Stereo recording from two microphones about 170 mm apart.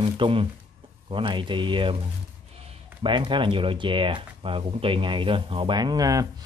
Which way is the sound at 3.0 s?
30° right (ahead or behind).